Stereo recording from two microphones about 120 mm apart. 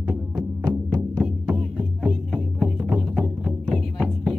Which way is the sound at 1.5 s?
5° right (ahead or behind).